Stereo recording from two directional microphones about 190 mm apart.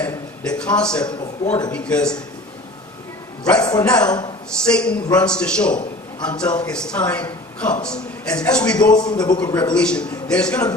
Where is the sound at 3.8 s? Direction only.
5° left (ahead or behind).